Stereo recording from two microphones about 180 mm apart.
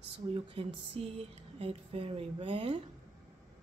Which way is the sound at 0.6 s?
35° right (ahead or behind).